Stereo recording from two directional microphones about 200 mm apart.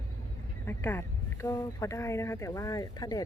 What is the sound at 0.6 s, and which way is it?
Speech, 10° left (ahead or behind).